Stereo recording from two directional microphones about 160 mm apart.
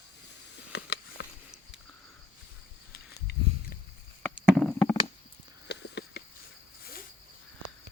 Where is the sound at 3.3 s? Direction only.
90° left.